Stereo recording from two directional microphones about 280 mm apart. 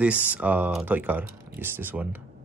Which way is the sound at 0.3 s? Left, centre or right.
Centre.